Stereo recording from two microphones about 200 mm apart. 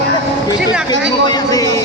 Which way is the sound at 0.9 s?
20° left (ahead or behind).